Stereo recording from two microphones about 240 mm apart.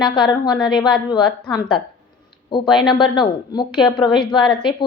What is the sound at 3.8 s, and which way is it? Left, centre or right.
Speech, centre.